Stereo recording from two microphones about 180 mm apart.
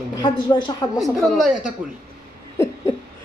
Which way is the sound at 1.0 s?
Centre (ahead or behind).